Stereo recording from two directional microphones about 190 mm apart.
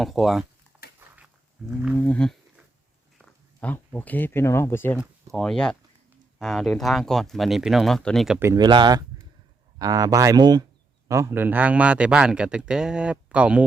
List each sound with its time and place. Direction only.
0.0 s speech: centre (ahead or behind)
0.9 s a sound: 10° right (ahead or behind)
1.7 s speech: 5° right (ahead or behind)
2.0 s a sound: 5° left (ahead or behind)
3.2 s speech: 5° left (ahead or behind)
4.9 s speech: centre (ahead or behind)
8.4 s speech: 20° right (ahead or behind)